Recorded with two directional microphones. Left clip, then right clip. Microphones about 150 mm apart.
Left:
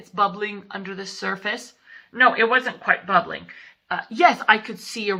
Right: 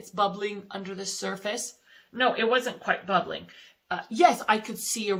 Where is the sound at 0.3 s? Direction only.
40° right (ahead or behind).